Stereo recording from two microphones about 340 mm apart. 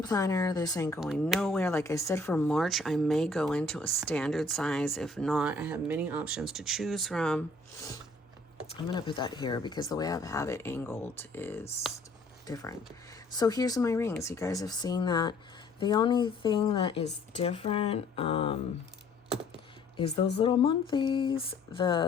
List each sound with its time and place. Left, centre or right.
0.0 s speech: centre
0.9 s speech: centre
12.5 s speech: centre
20.4 s speech: centre